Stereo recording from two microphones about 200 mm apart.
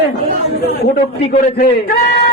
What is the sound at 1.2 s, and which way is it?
Speech, 40° left (ahead or behind).